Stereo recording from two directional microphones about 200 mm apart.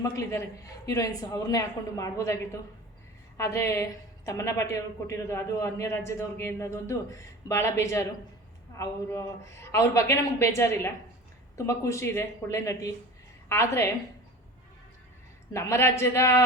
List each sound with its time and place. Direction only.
0.0 s a woman's voice: 15° left (ahead or behind)
15.5 s a woman's voice: 15° left (ahead or behind)